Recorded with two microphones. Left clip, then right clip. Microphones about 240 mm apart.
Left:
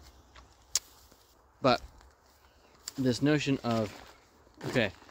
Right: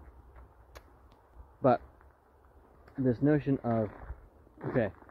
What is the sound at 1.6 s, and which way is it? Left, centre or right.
Speech, centre.